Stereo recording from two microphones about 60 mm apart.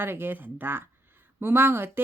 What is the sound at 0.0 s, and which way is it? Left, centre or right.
Speech, right.